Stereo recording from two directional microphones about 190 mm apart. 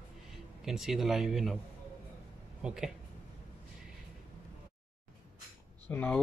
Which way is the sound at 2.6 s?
5° right (ahead or behind).